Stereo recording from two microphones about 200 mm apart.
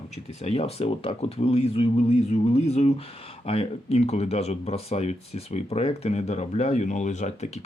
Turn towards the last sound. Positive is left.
turn(degrees=35)  # may be behind; listen again after turning